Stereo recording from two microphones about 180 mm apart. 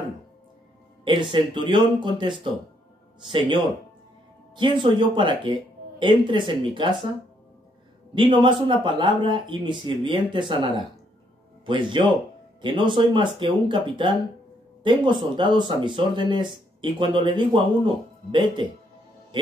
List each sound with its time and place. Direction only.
1.0 s speech: 25° right (ahead or behind)
4.6 s speech: 25° right (ahead or behind)
8.1 s speech: 25° right (ahead or behind)
11.6 s speech: 25° right (ahead or behind)